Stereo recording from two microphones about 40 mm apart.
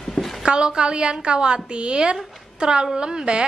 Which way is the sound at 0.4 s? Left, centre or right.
Right.